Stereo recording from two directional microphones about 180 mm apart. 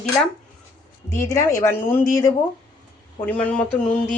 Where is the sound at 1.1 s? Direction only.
15° left (ahead or behind).